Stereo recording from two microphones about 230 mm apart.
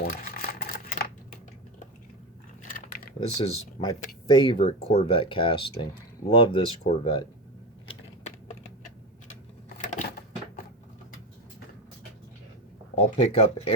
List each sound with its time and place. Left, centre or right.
0.0 s a sound: left
2.7 s typing: left
3.2 s speech: left
9.7 s crushing: left
13.1 s speech: left